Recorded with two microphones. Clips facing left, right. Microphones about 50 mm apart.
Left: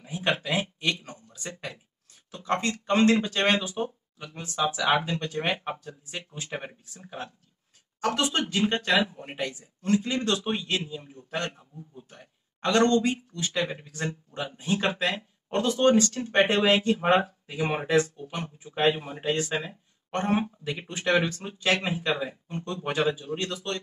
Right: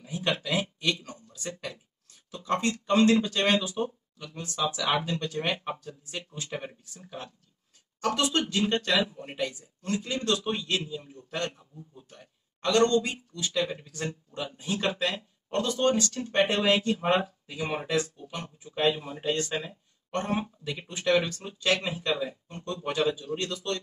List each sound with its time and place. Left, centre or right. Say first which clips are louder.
0.0 s a sound: left 2 dB; left
2.3 s speech: even; left
3.6 s a sound: even; left
4.6 s speech: left 3 dB; left
6.7 s speech: left 1 dB; centre
8.0 s speech: even; left
9.4 s speech: even; left; by 19.6 s centre
19.6 s a man's voice: left 2 dB; left